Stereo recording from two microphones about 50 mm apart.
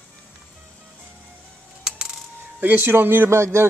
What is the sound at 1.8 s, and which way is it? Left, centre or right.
Coin, centre.